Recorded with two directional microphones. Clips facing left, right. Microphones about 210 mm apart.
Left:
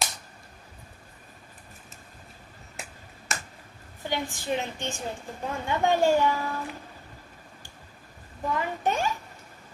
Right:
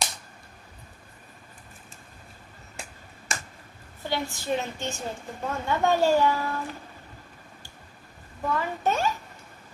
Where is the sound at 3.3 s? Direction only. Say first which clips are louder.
Even; centre (ahead or behind).